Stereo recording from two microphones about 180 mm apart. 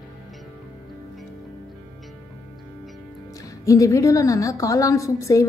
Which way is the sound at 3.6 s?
15° left (ahead or behind).